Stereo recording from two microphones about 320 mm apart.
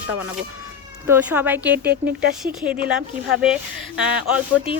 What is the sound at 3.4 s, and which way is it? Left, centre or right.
Speech, centre.